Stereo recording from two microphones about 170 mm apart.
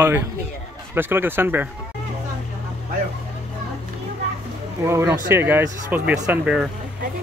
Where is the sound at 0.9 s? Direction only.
10° right (ahead or behind).